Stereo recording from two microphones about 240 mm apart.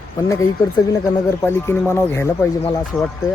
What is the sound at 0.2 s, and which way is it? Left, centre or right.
Speech, centre.